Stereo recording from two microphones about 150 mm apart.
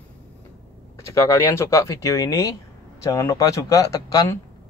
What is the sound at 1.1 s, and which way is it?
Speech, 20° left (ahead or behind).